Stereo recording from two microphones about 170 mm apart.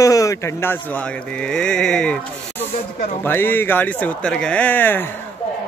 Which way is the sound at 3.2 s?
10° left (ahead or behind).